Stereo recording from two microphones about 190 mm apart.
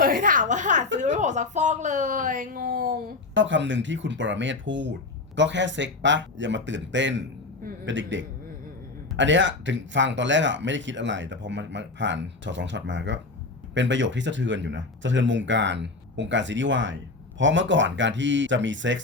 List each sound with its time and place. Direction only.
0.0 s a woman's voice: 45° right (ahead or behind)
3.3 s speech: 75° right (ahead or behind)